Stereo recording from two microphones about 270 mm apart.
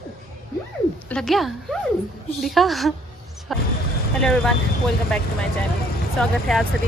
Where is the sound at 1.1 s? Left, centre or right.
Centre.